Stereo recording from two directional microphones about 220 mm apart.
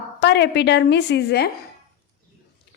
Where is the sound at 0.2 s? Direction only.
50° left (ahead or behind).